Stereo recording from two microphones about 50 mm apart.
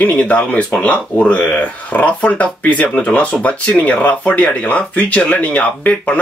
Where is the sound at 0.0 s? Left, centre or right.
Left.